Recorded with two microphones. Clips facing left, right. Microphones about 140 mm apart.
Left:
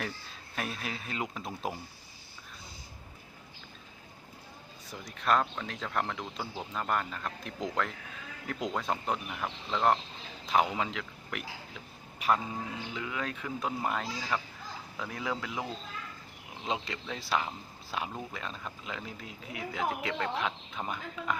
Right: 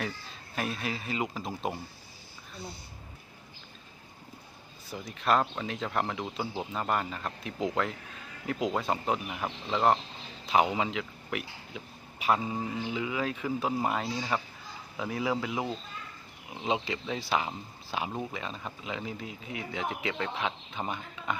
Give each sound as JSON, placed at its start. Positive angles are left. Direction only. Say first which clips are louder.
{"t": 0.0, "sound": "speech", "louder": "right 2 dB", "side_deg": 0}
{"t": 4.9, "sound": "speech", "louder": "right 1 dB", "side_deg": 0}
{"t": 16.6, "sound": "speech", "louder": "right 4 dB", "side_deg": 0}